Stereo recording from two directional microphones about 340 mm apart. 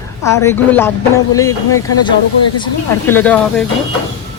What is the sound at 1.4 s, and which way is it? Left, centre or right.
Speech, left.